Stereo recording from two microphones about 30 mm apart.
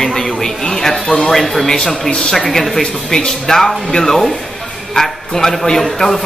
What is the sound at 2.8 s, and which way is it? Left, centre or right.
Speech, left.